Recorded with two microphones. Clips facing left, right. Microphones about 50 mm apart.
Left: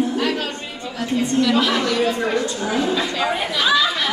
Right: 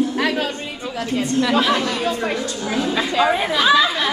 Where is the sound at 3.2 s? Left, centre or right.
Centre.